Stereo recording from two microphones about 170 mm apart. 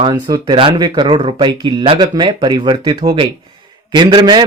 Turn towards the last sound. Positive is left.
turn(degrees=-25)  # may be behind; listen again after turning